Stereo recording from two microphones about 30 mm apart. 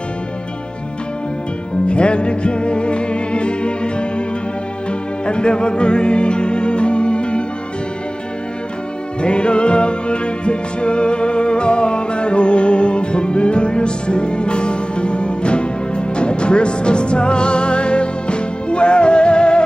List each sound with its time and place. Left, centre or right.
1.9 s music: left
5.2 s music: left
9.2 s music: left